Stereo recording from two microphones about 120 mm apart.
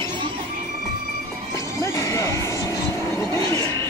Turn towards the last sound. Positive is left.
turn(degrees=25)  # may be behind; listen again after turning